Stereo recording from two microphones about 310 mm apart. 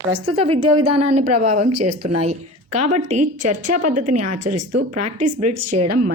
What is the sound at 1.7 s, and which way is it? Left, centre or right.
Speech, right.